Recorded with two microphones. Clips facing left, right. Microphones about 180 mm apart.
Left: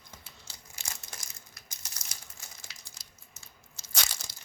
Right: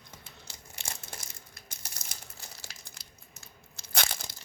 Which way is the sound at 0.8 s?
60° right (ahead or behind).